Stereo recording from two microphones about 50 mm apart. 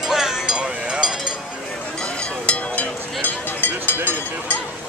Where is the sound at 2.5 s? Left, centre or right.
Left.